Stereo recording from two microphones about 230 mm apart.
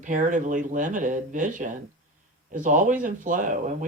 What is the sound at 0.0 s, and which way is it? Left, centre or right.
Speech, right.